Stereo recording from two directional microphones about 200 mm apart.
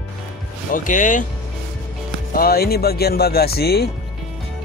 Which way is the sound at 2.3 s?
50° left (ahead or behind).